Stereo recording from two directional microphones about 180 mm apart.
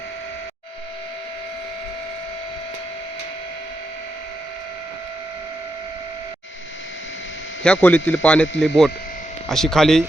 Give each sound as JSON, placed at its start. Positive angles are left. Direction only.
{"t": 7.6, "sound": "speech", "side_deg": 10}